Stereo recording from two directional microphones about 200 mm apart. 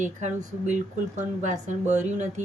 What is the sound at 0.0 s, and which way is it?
Speech, 35° right (ahead or behind).